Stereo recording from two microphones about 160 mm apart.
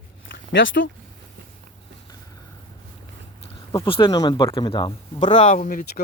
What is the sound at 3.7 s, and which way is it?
Speech, 35° left (ahead or behind).